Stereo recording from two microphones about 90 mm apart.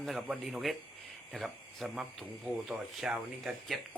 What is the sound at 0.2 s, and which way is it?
Speech, centre (ahead or behind).